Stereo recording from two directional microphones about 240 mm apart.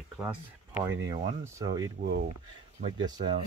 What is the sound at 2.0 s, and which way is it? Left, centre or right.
Speech, right.